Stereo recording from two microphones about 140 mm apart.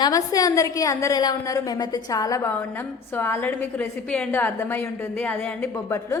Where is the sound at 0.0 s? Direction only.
25° left (ahead or behind).